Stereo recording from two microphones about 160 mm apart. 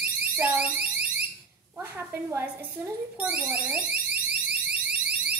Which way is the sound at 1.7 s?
15° right (ahead or behind).